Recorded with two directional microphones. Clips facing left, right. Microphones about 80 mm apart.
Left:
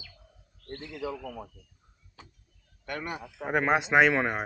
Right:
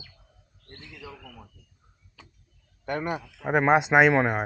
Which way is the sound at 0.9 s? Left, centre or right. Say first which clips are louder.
Left 9 dB; left.